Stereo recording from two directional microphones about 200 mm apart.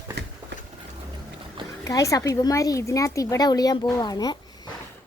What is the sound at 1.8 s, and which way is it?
Speech, 15° left (ahead or behind).